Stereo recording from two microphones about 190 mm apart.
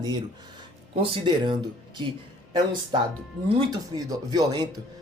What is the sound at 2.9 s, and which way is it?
Speech, 25° right (ahead or behind).